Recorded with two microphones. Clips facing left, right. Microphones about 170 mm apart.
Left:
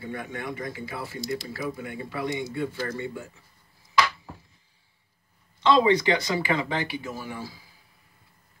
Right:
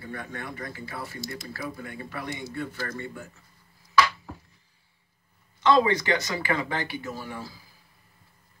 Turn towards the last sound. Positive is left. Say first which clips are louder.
# left 1 dB
turn(degrees=10)  # may be behind; listen again after turning